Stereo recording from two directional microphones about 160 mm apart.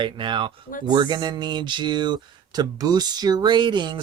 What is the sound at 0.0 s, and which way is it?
Speech, 30° right (ahead or behind).